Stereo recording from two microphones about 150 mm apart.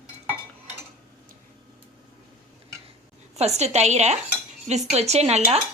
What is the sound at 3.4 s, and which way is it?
A woman's voice, 45° right (ahead or behind).